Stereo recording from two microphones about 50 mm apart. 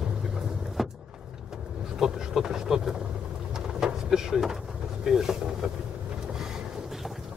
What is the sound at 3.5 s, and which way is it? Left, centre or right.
Pigeon, centre.